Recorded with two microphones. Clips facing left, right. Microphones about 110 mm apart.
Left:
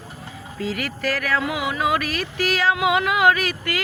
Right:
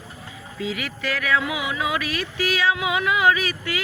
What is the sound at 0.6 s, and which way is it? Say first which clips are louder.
Speech: left 3 dB; 50° left (ahead or behind).